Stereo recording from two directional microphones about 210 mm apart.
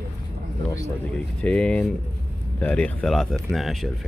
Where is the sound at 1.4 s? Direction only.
5° left (ahead or behind).